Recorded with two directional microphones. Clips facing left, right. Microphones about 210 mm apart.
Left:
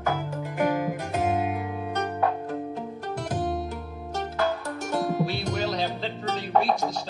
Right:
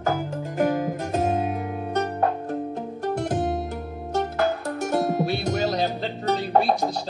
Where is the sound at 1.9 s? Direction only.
45° right (ahead or behind).